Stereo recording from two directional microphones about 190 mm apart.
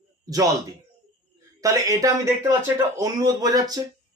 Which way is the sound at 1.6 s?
15° right (ahead or behind).